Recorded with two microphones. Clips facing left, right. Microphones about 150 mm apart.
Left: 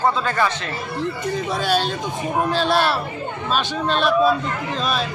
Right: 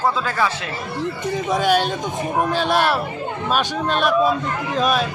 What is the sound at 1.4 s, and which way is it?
Speech, 15° right (ahead or behind).